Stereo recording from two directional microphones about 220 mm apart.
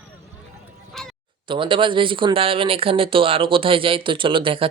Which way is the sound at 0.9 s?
Centre (ahead or behind).